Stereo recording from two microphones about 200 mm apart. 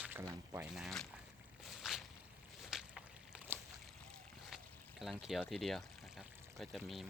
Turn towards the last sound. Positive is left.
turn(degrees=0)  # may be behind; listen again after turning